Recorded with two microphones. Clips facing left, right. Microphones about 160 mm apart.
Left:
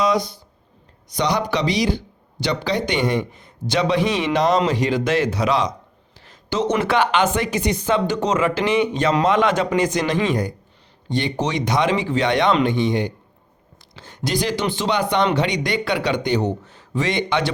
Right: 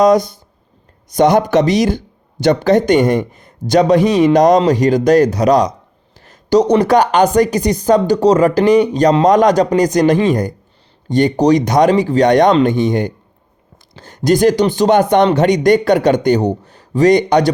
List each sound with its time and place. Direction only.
0.0 s speech: 45° right (ahead or behind)